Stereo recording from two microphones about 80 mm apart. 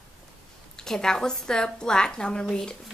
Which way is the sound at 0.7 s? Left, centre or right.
Centre.